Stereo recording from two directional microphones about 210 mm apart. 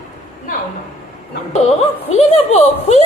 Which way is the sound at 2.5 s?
30° left (ahead or behind).